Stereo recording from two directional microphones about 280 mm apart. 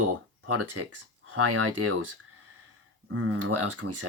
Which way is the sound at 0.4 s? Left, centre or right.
Right.